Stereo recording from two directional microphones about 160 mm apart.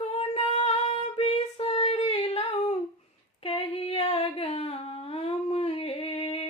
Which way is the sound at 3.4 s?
40° left (ahead or behind).